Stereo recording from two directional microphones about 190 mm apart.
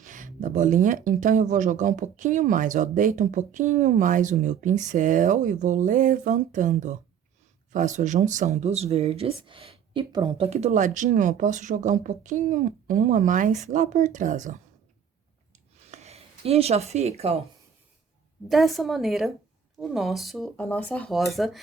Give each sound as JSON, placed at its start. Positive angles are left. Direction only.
{"t": 0.0, "sound": "speech", "side_deg": -45}
{"t": 15.9, "sound": "speech", "side_deg": -35}
{"t": 18.4, "sound": "speech", "side_deg": 0}